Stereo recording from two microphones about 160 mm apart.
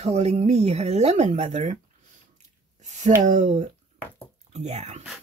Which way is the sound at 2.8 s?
45° right (ahead or behind).